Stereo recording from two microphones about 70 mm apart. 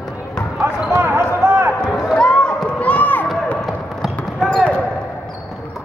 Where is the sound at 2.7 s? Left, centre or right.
Left.